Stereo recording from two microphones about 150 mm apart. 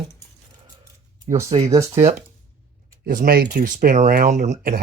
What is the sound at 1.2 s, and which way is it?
Speech, 20° right (ahead or behind).